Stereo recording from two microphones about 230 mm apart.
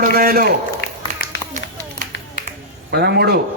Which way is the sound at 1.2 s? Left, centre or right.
Left.